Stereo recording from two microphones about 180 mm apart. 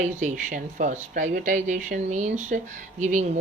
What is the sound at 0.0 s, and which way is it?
Speech, 45° right (ahead or behind).